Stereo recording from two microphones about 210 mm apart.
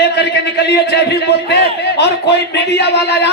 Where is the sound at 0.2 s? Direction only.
50° left (ahead or behind).